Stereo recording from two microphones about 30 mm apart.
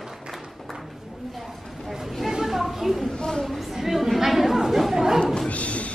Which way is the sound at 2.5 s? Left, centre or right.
Centre.